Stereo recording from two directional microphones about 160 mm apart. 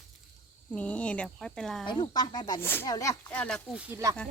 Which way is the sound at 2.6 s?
15° left (ahead or behind).